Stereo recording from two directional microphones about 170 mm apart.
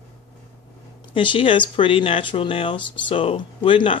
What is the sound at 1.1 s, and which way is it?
Speech, 30° left (ahead or behind).